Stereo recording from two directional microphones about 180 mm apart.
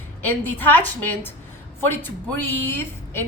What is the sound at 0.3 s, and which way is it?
A woman's voice, 10° left (ahead or behind).